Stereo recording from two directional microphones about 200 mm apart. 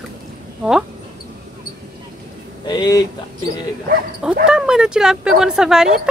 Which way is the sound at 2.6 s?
20° left (ahead or behind).